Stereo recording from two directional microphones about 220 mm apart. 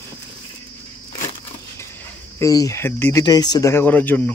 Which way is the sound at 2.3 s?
15° left (ahead or behind).